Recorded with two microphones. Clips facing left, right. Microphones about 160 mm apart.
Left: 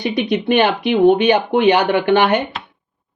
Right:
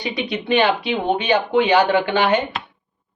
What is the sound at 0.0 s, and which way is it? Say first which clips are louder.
Speech: left 6 dB; 50° left (ahead or behind).